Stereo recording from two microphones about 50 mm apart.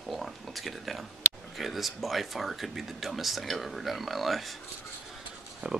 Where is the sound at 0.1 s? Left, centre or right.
Centre.